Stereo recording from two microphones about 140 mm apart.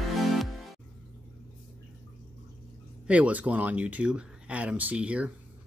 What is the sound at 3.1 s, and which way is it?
Speech, 10° right (ahead or behind).